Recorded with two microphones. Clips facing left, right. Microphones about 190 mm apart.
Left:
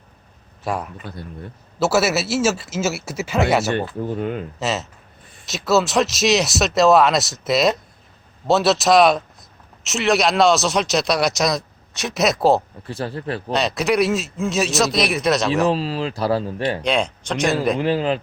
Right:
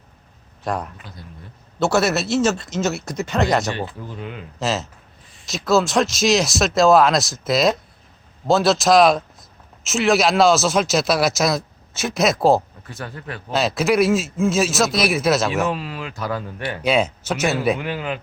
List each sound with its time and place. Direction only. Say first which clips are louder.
0.6 s a man's voice: even; 5° left (ahead or behind)
1.0 s speech: left 7 dB; 60° left (ahead or behind)
1.8 s speech: even; 5° left (ahead or behind)
3.8 s speech: left 6 dB; 50° left (ahead or behind)
4.6 s speech: right 3 dB; centre (ahead or behind)
12.8 s speech: left 7 dB; 30° left (ahead or behind)
13.5 s speech: right 1 dB; centre (ahead or behind)
15.6 s speech: left 5 dB; 30° left (ahead or behind)
16.8 s speech: right 2 dB; 5° right (ahead or behind)
17.7 s speech: left 7 dB; 30° left (ahead or behind)